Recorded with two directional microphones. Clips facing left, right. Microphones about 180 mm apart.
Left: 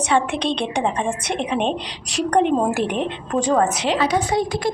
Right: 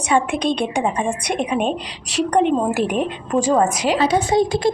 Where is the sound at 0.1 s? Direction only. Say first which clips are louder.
Right 3 dB; 10° right (ahead or behind).